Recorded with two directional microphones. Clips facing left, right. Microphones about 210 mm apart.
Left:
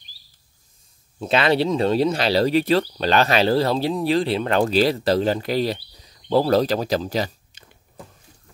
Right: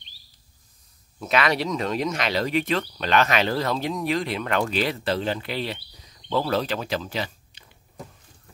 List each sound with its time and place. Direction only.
1.2 s speech: 30° left (ahead or behind)